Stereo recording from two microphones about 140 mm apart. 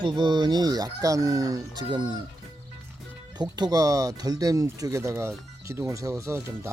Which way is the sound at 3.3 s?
30° right (ahead or behind).